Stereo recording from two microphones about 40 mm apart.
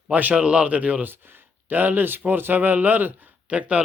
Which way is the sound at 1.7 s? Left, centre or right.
Right.